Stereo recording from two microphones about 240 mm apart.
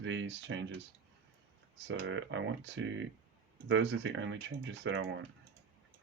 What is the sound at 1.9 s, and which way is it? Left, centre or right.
Speech, right.